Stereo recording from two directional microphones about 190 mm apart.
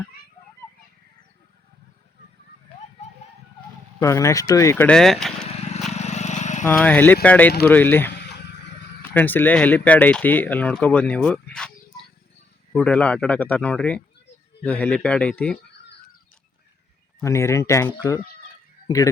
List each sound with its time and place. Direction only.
4.0 s speech: 15° left (ahead or behind)
5.9 s vehicle: 35° left (ahead or behind)
6.7 s speech: 10° left (ahead or behind)
12.7 s speech: 5° left (ahead or behind)
17.2 s speech: 15° left (ahead or behind)